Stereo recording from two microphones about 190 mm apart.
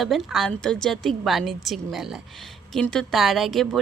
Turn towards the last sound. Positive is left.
turn(degrees=0)  # may be behind; listen again after turning